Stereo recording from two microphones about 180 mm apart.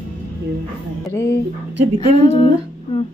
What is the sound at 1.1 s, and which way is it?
Speech, 15° left (ahead or behind).